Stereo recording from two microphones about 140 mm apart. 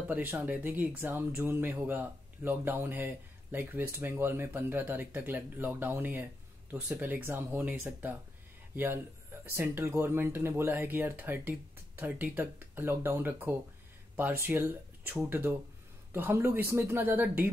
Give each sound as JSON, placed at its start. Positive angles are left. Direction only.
{"t": 0.1, "sound": "speech", "side_deg": -15}